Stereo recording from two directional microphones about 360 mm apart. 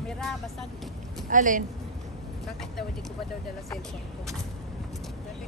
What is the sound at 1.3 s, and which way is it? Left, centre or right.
Speech, right.